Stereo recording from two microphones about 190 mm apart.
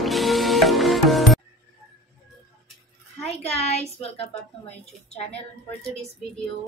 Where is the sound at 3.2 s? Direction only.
35° left (ahead or behind).